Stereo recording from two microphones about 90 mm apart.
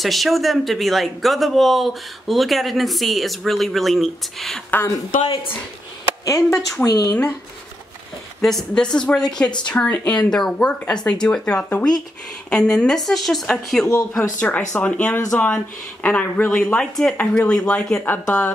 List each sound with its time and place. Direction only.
0.0 s speech: centre (ahead or behind)
4.6 s a woman's voice: 20° left (ahead or behind)
5.2 s a woman's voice: 75° left (ahead or behind)
6.2 s speech: 40° left (ahead or behind)
8.4 s speech: 5° left (ahead or behind)
14.1 s speech: 15° left (ahead or behind)